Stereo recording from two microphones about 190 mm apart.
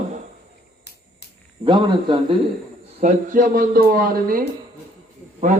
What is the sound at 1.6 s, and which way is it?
Speech, 25° right (ahead or behind).